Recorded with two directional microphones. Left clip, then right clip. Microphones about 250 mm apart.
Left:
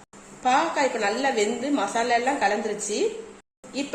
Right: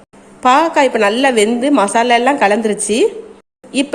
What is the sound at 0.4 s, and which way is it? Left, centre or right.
A woman's voice, right.